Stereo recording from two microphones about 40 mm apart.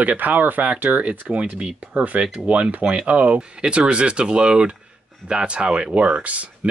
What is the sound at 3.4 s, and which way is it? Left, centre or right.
Speech, right.